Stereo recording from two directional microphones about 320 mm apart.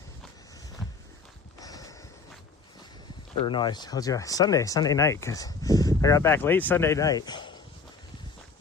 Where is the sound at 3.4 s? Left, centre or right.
Centre.